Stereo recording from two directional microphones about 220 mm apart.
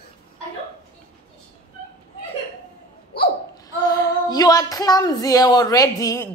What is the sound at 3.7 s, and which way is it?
Speech, 15° left (ahead or behind).